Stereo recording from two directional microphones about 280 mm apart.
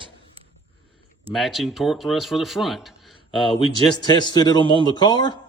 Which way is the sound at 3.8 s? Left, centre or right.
Centre.